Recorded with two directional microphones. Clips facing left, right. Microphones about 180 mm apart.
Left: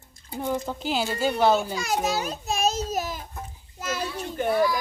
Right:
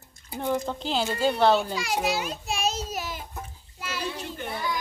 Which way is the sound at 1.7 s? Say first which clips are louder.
Left 1 dB; 45° left (ahead or behind).